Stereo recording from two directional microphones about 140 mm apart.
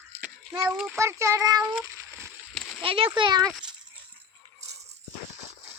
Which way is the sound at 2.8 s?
40° right (ahead or behind).